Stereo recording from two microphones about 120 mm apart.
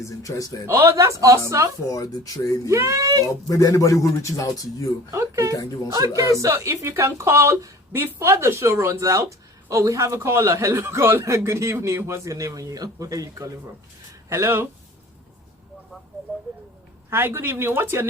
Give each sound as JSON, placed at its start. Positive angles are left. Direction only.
{"t": 0.0, "sound": "a man's voice", "side_deg": 25}
{"t": 0.7, "sound": "a man's voice", "side_deg": -25}
{"t": 1.9, "sound": "a man's voice", "side_deg": 30}
{"t": 2.6, "sound": "a man's voice", "side_deg": -25}
{"t": 3.5, "sound": "a man's voice", "side_deg": 25}
{"t": 5.1, "sound": "a man's voice", "side_deg": -25}
{"t": 17.1, "sound": "a man's voice", "side_deg": -20}